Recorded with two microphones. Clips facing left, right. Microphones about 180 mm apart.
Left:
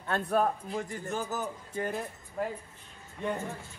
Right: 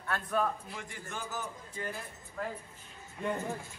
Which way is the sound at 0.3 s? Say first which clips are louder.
Left 4 dB; 40° left (ahead or behind).